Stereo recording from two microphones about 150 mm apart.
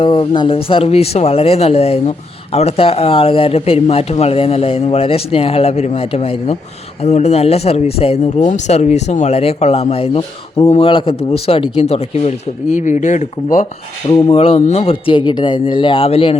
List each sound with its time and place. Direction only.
0.0 s speech: 35° left (ahead or behind); by 13.7 s 55° left (ahead or behind)
14.3 s speech: 40° left (ahead or behind)